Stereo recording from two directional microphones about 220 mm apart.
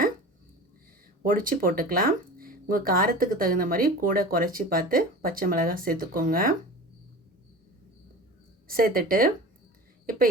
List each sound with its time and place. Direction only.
1.2 s speech: 40° right (ahead or behind)
8.6 s speech: 40° right (ahead or behind)